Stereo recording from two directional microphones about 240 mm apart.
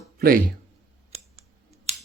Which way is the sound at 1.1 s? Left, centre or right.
Right.